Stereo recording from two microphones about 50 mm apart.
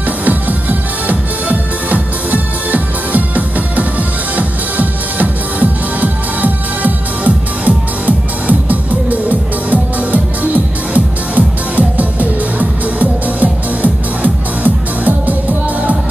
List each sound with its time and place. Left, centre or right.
0.2 s music: right